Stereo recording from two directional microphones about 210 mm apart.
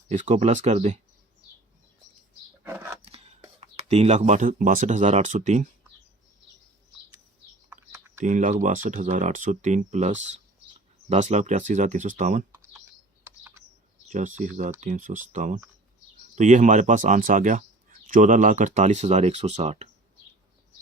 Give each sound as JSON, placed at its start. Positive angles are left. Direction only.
{"t": 0.1, "sound": "speech", "side_deg": -35}
{"t": 2.6, "sound": "a sound", "side_deg": -10}
{"t": 3.0, "sound": "chopping", "side_deg": -30}
{"t": 3.6, "sound": "speech", "side_deg": -30}
{"t": 7.7, "sound": "typing", "side_deg": -10}
{"t": 8.2, "sound": "speech", "side_deg": -35}
{"t": 14.1, "sound": "speech", "side_deg": -35}